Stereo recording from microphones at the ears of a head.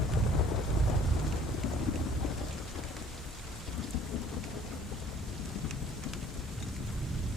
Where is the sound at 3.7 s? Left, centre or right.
Left.